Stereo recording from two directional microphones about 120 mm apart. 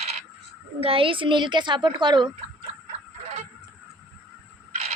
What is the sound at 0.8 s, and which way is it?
Speech, 50° right (ahead or behind).